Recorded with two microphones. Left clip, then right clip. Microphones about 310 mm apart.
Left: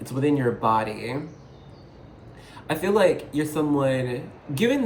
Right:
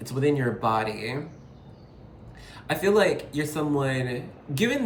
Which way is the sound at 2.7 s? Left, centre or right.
Centre.